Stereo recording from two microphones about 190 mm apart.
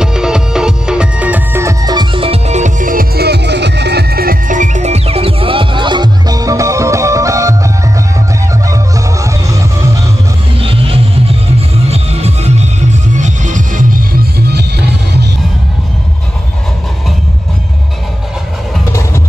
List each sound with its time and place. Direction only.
0.0 s music: 5° right (ahead or behind)
10.6 s music: 30° right (ahead or behind); by 15.2 s 60° right (ahead or behind)
18.9 s music: 15° left (ahead or behind)